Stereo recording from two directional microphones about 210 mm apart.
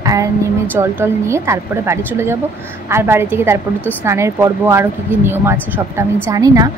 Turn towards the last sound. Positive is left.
turn(degrees=-15)  # may be behind; listen again after turning